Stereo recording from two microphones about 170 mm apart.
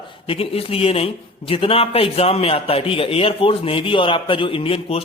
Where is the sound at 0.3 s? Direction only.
35° left (ahead or behind).